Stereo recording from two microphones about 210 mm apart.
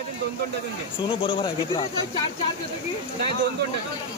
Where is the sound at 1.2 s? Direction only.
25° left (ahead or behind).